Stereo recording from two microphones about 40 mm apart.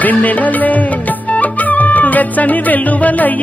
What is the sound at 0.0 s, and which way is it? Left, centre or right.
Music, left.